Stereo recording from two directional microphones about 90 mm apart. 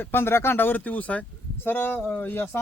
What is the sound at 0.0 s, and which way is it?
Speech, 25° left (ahead or behind).